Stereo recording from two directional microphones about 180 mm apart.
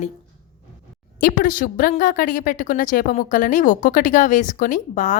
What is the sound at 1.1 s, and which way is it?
A woman's voice, 50° left (ahead or behind).